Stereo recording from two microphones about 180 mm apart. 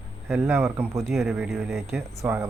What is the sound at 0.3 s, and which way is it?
Speech, 10° right (ahead or behind).